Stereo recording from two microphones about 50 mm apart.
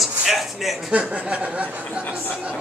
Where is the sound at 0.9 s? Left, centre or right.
Right.